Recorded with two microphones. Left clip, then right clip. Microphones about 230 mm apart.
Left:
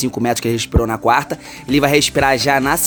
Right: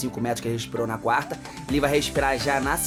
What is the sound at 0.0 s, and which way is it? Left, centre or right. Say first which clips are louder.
Speech: left 9 dB; left.